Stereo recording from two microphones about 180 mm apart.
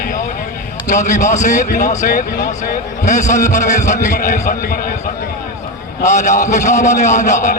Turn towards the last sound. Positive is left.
turn(degrees=40)  # may be behind; listen again after turning